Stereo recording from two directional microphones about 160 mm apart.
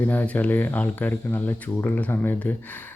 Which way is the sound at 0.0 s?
10° left (ahead or behind).